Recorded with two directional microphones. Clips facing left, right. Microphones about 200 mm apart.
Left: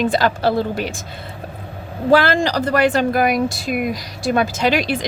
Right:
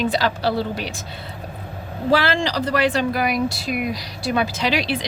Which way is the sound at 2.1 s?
50° left (ahead or behind).